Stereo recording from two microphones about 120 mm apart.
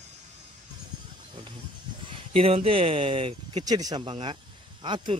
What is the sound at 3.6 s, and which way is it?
Speech, 30° right (ahead or behind).